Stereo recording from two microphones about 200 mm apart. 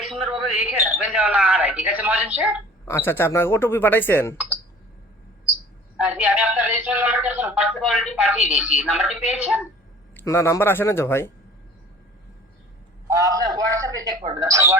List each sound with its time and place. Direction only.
0.0 s speech: centre (ahead or behind)
2.8 s speech: 10° left (ahead or behind)
6.0 s speech: 5° right (ahead or behind)
10.2 s speech: 15° left (ahead or behind)
13.1 s speech: 15° right (ahead or behind)
13.7 s a sound: 15° right (ahead or behind)
14.3 s speech: 20° right (ahead or behind)